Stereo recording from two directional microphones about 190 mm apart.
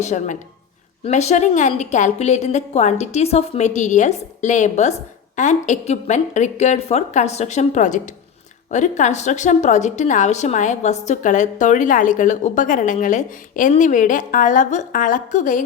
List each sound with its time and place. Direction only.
0.0 s a woman's voice: 40° left (ahead or behind)